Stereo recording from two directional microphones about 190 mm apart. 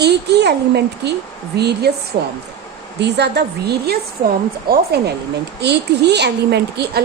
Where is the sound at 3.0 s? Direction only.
60° right (ahead or behind).